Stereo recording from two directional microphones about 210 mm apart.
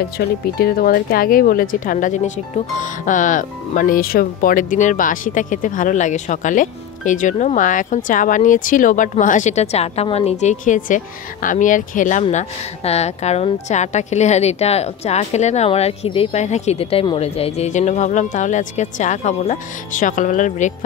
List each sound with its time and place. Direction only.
0.2 s speech: 50° left (ahead or behind)